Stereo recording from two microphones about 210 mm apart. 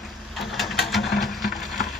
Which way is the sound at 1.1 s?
50° left (ahead or behind).